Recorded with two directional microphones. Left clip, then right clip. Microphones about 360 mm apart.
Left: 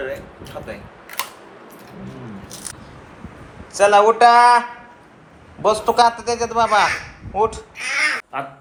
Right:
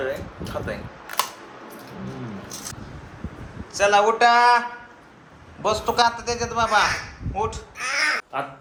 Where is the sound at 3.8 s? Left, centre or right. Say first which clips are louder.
Left 5 dB; centre.